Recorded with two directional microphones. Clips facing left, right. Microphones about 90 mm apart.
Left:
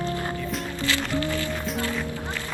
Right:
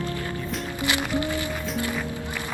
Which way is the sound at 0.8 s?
15° right (ahead or behind).